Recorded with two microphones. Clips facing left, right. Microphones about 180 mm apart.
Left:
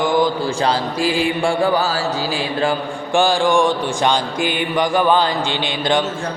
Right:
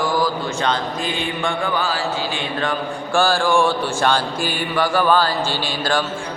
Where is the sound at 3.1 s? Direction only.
15° left (ahead or behind).